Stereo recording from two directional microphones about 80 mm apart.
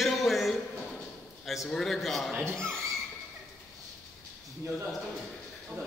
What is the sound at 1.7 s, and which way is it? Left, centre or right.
Speech, centre.